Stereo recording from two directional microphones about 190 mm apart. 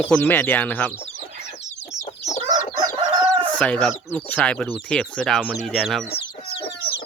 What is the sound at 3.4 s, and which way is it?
Chicken, 5° left (ahead or behind).